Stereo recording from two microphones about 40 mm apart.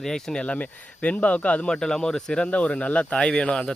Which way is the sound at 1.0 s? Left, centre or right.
Left.